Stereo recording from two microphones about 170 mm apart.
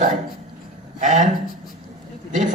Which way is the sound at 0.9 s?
45° right (ahead or behind).